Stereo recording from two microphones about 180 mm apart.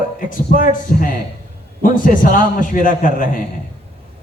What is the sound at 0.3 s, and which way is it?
A man's voice, 50° left (ahead or behind).